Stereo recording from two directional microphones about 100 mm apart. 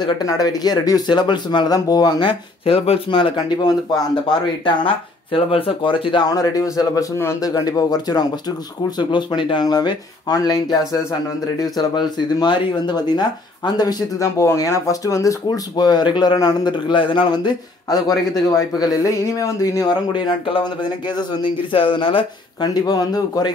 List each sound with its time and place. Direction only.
0.0 s speech: 40° left (ahead or behind); by 3.3 s 60° left (ahead or behind)
3.3 s speech: 45° left (ahead or behind)
4.6 s speech: 60° left (ahead or behind)
6.2 s speech: 35° left (ahead or behind)
20.1 s speech: 55° left (ahead or behind)
22.8 s speech: 40° left (ahead or behind)